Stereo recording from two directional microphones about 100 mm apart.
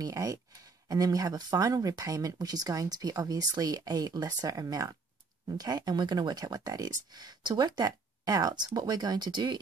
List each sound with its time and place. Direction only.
0.0 s speech: 35° right (ahead or behind)